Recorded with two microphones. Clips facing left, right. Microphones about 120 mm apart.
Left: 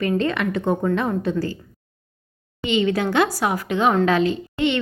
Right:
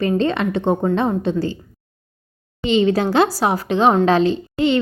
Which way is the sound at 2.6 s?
30° right (ahead or behind).